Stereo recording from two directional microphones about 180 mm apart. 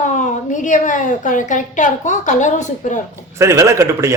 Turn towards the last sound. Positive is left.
turn(degrees=-15)  # may be behind; listen again after turning